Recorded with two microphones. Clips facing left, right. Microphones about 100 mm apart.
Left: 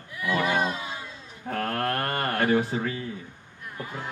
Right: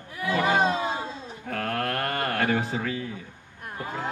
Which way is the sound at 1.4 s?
30° left (ahead or behind).